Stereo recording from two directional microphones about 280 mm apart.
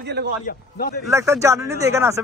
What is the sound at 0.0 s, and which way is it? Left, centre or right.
Speech, right.